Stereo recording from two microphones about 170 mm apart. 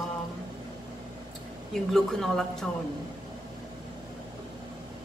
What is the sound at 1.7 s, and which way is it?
Speech, centre (ahead or behind).